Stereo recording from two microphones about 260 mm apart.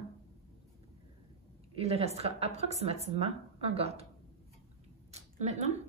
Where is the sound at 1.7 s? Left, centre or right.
Right.